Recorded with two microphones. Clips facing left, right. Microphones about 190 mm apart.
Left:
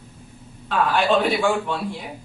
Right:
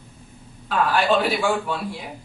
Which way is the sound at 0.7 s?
Centre (ahead or behind).